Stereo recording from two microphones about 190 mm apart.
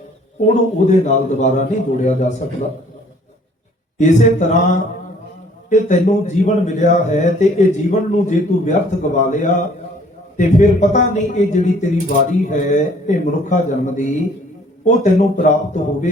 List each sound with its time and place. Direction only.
0.4 s a man's voice: 40° left (ahead or behind)
3.9 s a man's voice: 40° left (ahead or behind)